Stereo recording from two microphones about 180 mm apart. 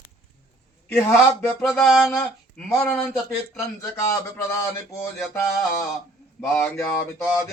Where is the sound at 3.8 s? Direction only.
20° left (ahead or behind).